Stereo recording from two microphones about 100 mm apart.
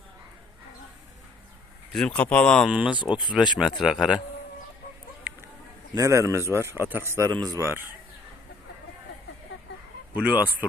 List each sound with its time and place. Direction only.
1.9 s speech: 5° left (ahead or behind)
2.6 s speech: 5° right (ahead or behind)
5.3 s a sound: 15° right (ahead or behind)
5.9 s a man's voice: 30° right (ahead or behind)
7.3 s a man's voice: 40° right (ahead or behind)
7.6 s a man's voice: 20° right (ahead or behind)
10.2 s speech: 15° right (ahead or behind)